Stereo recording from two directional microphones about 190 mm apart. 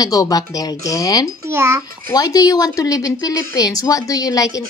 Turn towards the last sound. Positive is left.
turn(degrees=20)  # may be behind; listen again after turning